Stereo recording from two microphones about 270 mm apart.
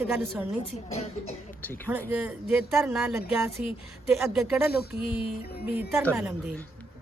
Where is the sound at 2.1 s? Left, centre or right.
Centre.